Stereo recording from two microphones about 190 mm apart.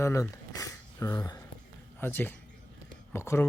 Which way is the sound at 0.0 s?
15° left (ahead or behind).